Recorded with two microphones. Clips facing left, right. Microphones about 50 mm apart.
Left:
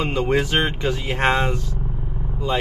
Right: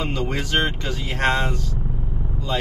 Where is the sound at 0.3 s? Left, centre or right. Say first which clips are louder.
Left 4 dB; centre.